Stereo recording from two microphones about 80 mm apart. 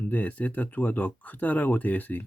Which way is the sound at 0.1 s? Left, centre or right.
Left.